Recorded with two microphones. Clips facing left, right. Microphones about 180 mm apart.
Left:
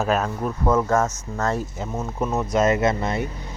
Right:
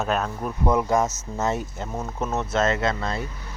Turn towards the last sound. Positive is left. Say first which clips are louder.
# left 4 dB
turn(degrees=20)  # may be behind; listen again after turning